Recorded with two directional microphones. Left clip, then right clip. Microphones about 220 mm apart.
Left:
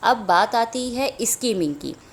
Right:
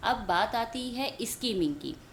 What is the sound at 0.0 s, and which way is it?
A woman's voice, 25° left (ahead or behind).